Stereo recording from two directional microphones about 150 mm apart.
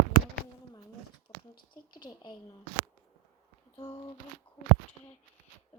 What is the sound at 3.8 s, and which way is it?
Speech, 30° left (ahead or behind).